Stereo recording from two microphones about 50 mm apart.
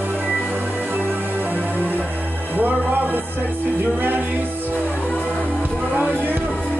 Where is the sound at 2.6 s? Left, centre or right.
Right.